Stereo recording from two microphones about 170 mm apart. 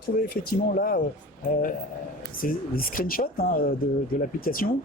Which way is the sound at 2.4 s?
55° left (ahead or behind).